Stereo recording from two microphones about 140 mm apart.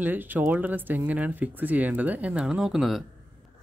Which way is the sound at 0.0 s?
15° right (ahead or behind).